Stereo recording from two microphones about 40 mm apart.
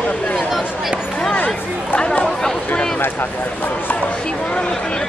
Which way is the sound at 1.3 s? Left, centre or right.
Left.